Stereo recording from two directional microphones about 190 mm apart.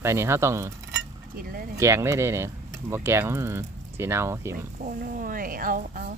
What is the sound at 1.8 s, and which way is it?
Speech, 15° right (ahead or behind).